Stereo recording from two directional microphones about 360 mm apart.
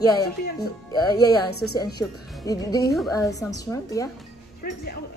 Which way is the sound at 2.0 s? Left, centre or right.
Centre.